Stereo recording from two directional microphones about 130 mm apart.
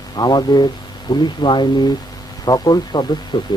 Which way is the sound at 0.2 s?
35° left (ahead or behind).